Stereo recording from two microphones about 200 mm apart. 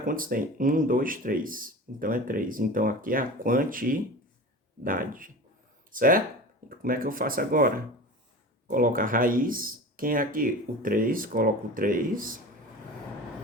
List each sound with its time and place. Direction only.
0.0 s speech: 45° right (ahead or behind)